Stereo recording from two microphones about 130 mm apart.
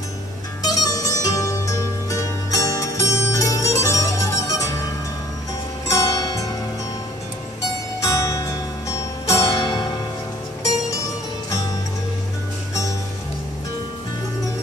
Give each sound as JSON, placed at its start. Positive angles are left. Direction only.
{"t": 0.7, "sound": "music", "side_deg": 25}
{"t": 5.9, "sound": "zither", "side_deg": 25}
{"t": 8.0, "sound": "music", "side_deg": 25}